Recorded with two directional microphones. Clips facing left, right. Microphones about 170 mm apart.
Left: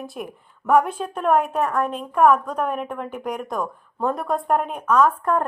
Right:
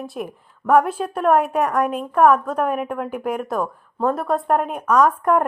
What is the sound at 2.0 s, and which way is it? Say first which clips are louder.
A woman's voice: right 1 dB; 5° right (ahead or behind).